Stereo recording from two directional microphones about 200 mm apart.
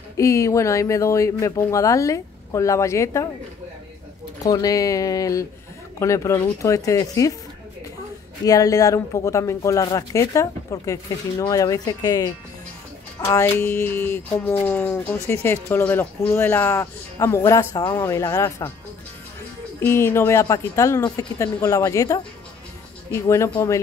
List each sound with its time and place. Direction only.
0.2 s speech: 15° left (ahead or behind)
4.4 s speech: 20° left (ahead or behind)
8.5 s speech: 15° left (ahead or behind)
19.8 s speech: 10° left (ahead or behind)
23.2 s speech: 15° left (ahead or behind)